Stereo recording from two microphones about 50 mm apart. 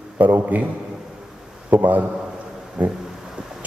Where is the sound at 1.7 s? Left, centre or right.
Right.